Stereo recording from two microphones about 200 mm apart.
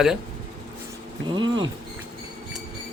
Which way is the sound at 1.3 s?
20° right (ahead or behind).